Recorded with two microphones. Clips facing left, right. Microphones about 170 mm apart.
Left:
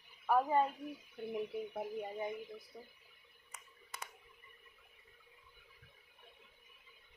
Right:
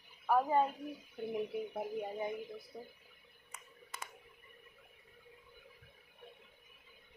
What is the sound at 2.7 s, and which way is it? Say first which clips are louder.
Speech: right 5 dB; 25° right (ahead or behind).